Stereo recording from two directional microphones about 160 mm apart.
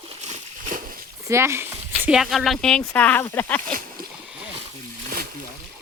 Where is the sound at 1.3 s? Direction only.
15° right (ahead or behind).